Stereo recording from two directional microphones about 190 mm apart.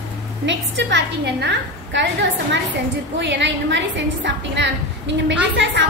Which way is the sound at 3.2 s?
70° right (ahead or behind).